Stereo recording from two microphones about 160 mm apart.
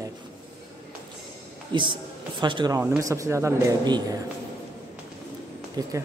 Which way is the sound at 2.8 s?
15° right (ahead or behind).